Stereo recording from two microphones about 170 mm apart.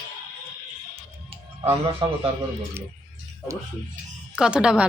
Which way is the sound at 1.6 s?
35° right (ahead or behind).